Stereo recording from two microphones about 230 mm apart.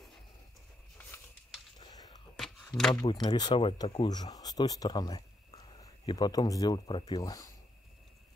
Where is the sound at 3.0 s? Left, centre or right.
Left.